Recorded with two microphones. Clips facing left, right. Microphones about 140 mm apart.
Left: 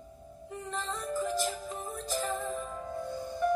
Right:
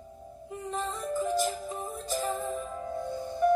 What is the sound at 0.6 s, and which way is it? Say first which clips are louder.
Music: right 3 dB; 25° right (ahead or behind).